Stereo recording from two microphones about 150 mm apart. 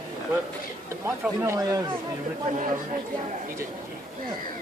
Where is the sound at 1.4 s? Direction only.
20° right (ahead or behind).